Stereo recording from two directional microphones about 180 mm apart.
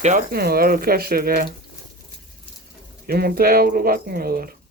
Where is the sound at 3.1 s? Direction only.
60° right (ahead or behind).